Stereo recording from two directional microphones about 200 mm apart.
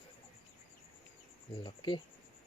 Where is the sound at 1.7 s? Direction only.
25° left (ahead or behind).